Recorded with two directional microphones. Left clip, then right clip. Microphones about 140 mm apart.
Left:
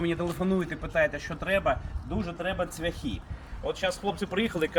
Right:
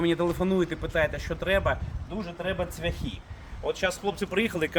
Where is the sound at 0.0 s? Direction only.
30° right (ahead or behind).